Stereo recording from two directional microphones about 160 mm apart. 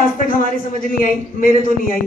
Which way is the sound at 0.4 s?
60° left (ahead or behind).